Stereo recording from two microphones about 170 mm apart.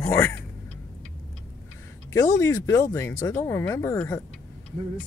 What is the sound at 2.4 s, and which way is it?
Speech, 15° left (ahead or behind).